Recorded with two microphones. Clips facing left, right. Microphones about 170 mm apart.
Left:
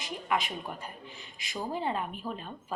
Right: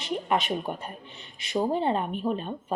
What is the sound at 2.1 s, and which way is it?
Speech, 65° right (ahead or behind).